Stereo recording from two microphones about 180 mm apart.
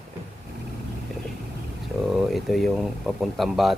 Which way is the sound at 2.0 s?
Centre (ahead or behind).